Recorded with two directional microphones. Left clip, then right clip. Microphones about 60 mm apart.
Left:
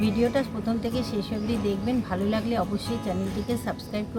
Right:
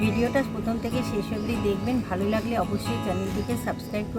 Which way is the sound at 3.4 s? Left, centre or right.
Centre.